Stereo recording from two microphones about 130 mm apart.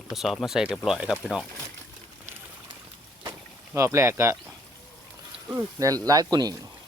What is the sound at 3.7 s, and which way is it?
Speech, 20° right (ahead or behind).